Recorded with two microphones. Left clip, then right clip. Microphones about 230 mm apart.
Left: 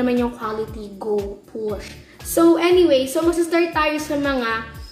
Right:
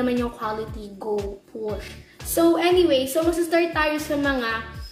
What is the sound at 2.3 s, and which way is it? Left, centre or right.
A woman's voice, centre.